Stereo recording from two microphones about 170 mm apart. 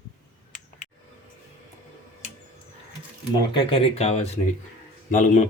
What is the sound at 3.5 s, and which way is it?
Speech, 35° left (ahead or behind).